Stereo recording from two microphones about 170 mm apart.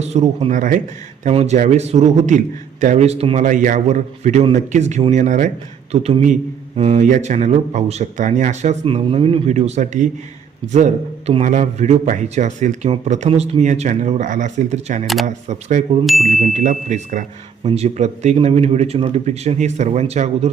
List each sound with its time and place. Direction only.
0.0 s a man's voice: 40° right (ahead or behind)
5.9 s a man's voice: 35° right (ahead or behind)
15.0 s speech: centre (ahead or behind)
16.4 s a man's voice: 45° right (ahead or behind)